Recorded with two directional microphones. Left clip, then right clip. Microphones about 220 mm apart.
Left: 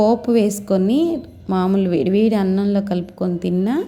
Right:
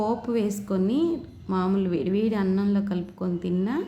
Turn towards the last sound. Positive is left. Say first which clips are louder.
# left 7 dB
turn(degrees=25)  # may be behind; listen again after turning